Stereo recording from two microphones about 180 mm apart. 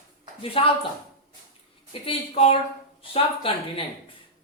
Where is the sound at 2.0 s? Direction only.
35° left (ahead or behind).